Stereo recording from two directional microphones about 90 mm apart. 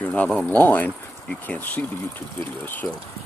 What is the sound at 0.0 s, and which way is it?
Speech, 15° left (ahead or behind).